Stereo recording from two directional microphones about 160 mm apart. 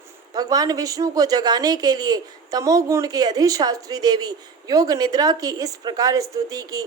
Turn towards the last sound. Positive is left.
turn(degrees=-20)  # may be behind; listen again after turning